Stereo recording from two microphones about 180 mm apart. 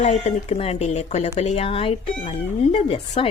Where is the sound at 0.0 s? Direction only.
40° left (ahead or behind).